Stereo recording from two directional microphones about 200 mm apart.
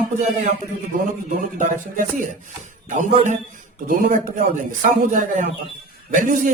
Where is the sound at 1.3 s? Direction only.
40° right (ahead or behind).